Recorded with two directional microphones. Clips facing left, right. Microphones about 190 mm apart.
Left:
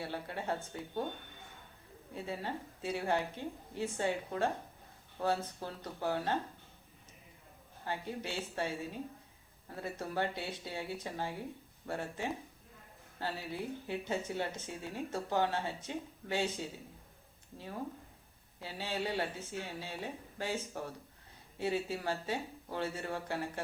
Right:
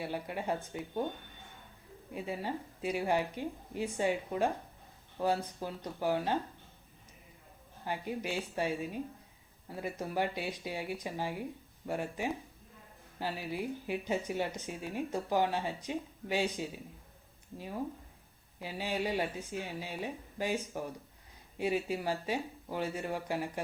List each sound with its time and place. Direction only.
0.0 s speech: 15° right (ahead or behind)
2.1 s speech: 15° right (ahead or behind)
7.9 s speech: 15° right (ahead or behind)
18.6 s speech: 15° right (ahead or behind)